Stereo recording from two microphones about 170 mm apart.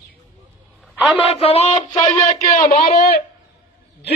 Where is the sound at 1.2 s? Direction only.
35° left (ahead or behind).